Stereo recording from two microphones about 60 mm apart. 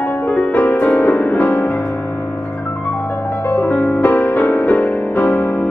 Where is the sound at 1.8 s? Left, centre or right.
Centre; by 3.4 s left.